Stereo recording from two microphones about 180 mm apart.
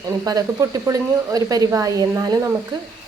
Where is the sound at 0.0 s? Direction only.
20° right (ahead or behind).